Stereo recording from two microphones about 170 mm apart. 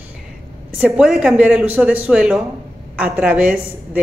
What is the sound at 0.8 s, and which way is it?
A woman's voice, 5° right (ahead or behind).